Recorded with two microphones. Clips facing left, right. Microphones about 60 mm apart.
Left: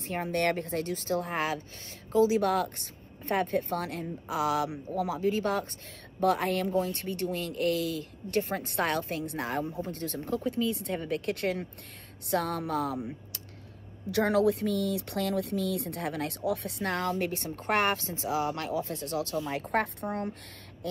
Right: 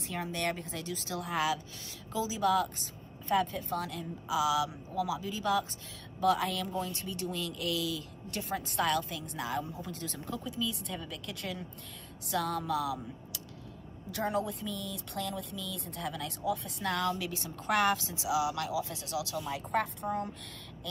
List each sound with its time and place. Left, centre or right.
0.0 s speech: left
0.3 s speech: left
10.5 s speech: left
14.1 s speech: left